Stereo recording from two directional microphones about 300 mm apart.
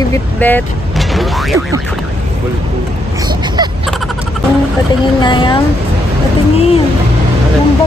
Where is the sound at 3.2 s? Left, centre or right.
Centre.